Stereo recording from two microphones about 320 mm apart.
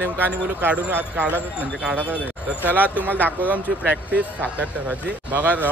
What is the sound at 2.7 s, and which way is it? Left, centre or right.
Speech, centre.